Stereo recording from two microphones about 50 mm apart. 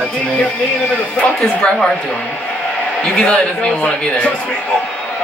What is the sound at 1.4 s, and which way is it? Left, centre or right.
Speech, centre.